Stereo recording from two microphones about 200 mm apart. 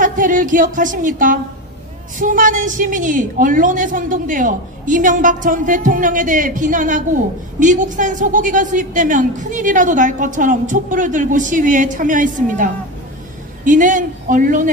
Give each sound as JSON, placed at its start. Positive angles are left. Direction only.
{"t": 0.0, "sound": "a woman's voice", "side_deg": -40}